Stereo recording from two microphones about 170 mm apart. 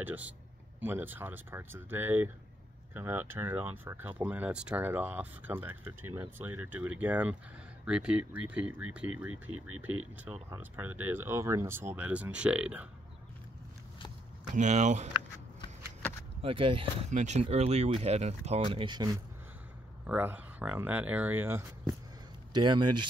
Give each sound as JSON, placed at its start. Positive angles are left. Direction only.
{"t": 0.0, "sound": "speech", "side_deg": -10}
{"t": 14.5, "sound": "speech", "side_deg": -45}
{"t": 16.4, "sound": "speech", "side_deg": -30}
{"t": 17.1, "sound": "speech", "side_deg": -45}
{"t": 20.1, "sound": "speech", "side_deg": -10}
{"t": 22.5, "sound": "speech", "side_deg": -25}